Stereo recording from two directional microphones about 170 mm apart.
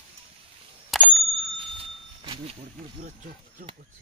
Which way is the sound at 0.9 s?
Centre (ahead or behind).